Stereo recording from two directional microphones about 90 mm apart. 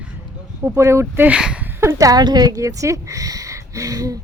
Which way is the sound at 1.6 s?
25° right (ahead or behind).